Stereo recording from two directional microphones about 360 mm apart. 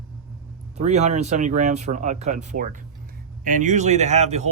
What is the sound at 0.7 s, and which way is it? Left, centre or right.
Speech, centre.